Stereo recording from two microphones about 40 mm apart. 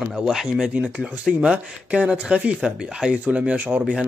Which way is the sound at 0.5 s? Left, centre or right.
Right.